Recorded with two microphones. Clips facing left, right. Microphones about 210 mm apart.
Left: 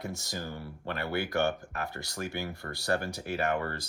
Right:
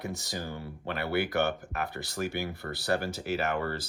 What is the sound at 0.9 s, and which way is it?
Speech, 50° left (ahead or behind).